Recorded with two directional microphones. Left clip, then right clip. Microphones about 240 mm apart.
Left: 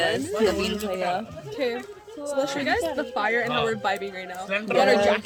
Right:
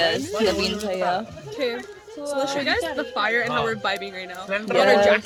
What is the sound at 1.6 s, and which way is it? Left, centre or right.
Speech, centre.